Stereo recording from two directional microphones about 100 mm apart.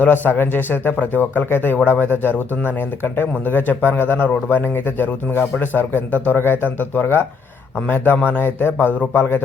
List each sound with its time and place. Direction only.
0.0 s a man's voice: 20° left (ahead or behind)